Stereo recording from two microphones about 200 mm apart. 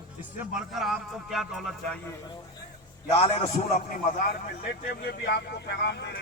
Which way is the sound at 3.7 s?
40° left (ahead or behind).